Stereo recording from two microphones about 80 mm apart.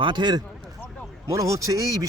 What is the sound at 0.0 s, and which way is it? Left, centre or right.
Speech, right.